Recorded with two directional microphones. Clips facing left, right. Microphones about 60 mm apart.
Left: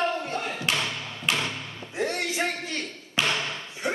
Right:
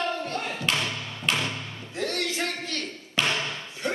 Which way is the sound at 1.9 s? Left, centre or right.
Left.